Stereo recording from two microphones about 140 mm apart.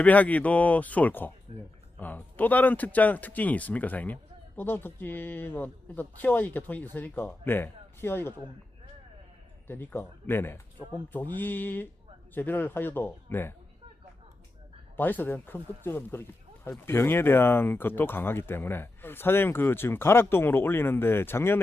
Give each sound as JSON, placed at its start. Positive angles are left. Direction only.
{"t": 0.0, "sound": "speech", "side_deg": 10}
{"t": 9.6, "sound": "speech", "side_deg": 15}
{"t": 14.9, "sound": "speech", "side_deg": 15}